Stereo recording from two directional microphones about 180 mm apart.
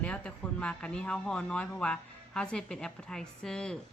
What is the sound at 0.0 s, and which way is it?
Speech, 5° left (ahead or behind).